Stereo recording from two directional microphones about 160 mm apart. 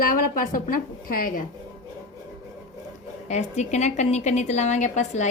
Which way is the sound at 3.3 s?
45° left (ahead or behind).